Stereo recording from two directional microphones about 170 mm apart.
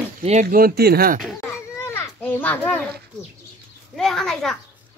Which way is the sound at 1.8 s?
15° left (ahead or behind).